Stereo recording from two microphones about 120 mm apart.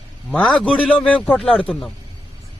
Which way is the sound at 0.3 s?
10° left (ahead or behind).